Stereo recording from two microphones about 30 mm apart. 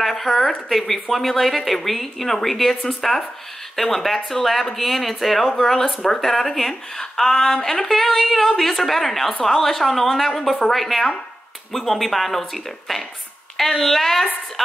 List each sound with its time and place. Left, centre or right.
0.0 s a woman's voice: centre
7.9 s a woman's voice: centre